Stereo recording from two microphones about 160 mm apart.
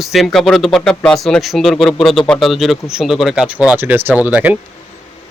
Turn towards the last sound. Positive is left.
turn(degrees=-10)  # may be behind; listen again after turning